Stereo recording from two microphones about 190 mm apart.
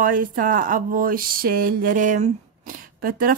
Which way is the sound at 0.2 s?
45° right (ahead or behind).